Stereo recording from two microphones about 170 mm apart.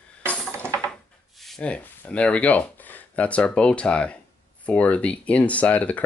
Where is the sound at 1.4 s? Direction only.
5° left (ahead or behind).